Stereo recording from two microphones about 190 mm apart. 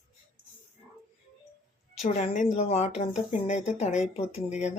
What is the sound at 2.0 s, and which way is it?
Speech, 40° left (ahead or behind).